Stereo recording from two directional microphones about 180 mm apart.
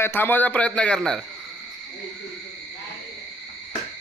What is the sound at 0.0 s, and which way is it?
A man's voice, 10° left (ahead or behind).